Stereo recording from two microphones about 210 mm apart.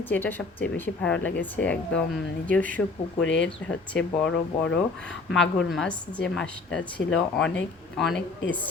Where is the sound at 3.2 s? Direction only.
60° left (ahead or behind).